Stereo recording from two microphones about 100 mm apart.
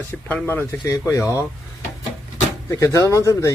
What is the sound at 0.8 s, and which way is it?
Speech, 30° left (ahead or behind).